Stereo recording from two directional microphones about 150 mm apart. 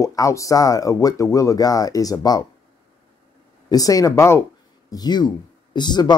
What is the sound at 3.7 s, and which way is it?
Speech, 25° left (ahead or behind).